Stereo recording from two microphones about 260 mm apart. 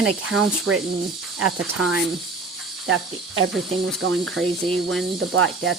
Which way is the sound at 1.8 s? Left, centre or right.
Right.